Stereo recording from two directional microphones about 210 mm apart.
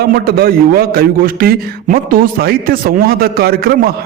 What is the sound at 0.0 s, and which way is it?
A man's voice, 45° right (ahead or behind).